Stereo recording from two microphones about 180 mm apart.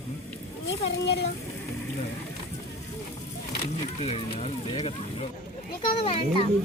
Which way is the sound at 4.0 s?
35° left (ahead or behind).